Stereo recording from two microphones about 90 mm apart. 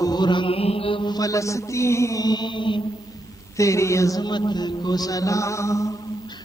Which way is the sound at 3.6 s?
35° left (ahead or behind).